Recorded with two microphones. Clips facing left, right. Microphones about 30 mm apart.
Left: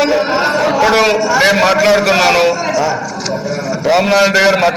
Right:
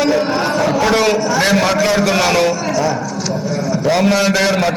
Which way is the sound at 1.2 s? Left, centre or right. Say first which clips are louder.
Left 4 dB; centre.